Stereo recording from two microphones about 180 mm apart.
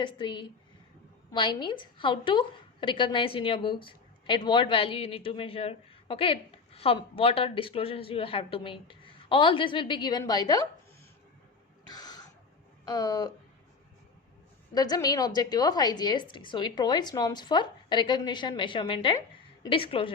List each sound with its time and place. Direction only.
0.0 s a woman's voice: 25° left (ahead or behind)
11.9 s a sound: 20° left (ahead or behind)
12.8 s speech: 20° left (ahead or behind)
14.7 s a woman's voice: 20° left (ahead or behind)